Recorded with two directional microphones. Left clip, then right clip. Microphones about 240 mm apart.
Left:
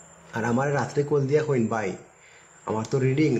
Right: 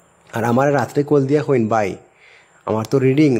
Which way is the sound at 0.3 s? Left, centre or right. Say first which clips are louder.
Right 9 dB; right.